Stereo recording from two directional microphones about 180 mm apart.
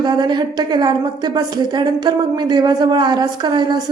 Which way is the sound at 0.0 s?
25° right (ahead or behind).